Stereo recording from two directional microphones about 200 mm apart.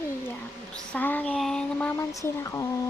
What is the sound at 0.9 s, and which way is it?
Speech, 10° left (ahead or behind).